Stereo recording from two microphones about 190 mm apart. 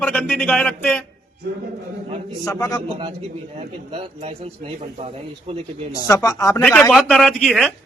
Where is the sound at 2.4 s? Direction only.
20° left (ahead or behind).